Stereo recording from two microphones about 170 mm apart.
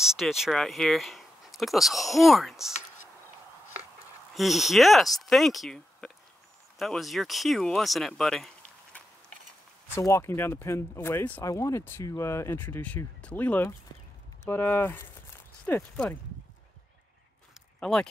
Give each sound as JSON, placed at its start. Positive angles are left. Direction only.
{"t": 0.0, "sound": "speech", "side_deg": 0}
{"t": 4.3, "sound": "speech", "side_deg": 0}
{"t": 9.9, "sound": "speech", "side_deg": 15}
{"t": 17.6, "sound": "a sound", "side_deg": 5}